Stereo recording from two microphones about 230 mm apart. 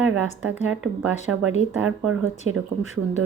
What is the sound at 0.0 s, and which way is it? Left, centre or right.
A woman's voice, right.